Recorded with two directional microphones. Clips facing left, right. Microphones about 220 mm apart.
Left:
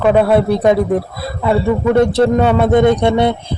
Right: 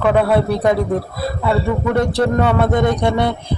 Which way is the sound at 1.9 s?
25° left (ahead or behind).